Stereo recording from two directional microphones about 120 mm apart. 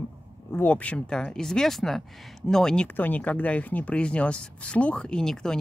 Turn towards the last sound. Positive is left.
turn(degrees=5)  # may be behind; listen again after turning